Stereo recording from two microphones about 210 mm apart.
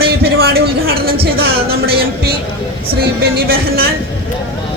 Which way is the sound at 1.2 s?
45° right (ahead or behind).